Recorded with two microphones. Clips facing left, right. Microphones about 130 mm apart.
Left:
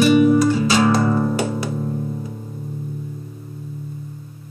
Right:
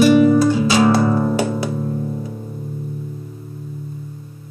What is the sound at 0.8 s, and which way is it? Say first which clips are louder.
Music: right 2 dB; 20° right (ahead or behind).